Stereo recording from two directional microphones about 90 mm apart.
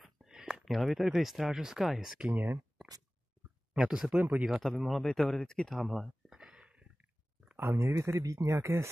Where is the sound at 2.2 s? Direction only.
25° right (ahead or behind).